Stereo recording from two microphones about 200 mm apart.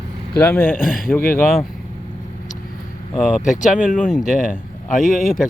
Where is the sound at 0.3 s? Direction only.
10° left (ahead or behind).